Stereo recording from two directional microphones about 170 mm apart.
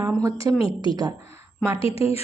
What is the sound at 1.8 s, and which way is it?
Speech, 35° left (ahead or behind).